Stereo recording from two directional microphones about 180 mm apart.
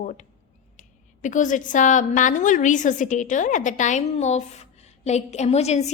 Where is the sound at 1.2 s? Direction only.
45° left (ahead or behind).